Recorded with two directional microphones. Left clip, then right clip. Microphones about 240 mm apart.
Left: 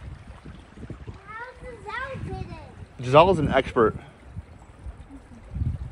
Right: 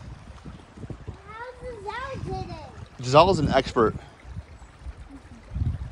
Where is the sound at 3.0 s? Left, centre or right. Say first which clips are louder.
Left 1 dB; centre.